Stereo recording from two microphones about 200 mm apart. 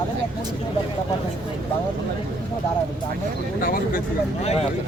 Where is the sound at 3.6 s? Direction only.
45° left (ahead or behind).